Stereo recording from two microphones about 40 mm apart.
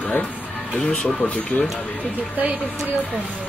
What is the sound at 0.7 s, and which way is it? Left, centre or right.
Speech, left.